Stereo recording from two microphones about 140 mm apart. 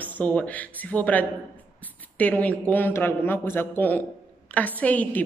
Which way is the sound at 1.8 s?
10° left (ahead or behind).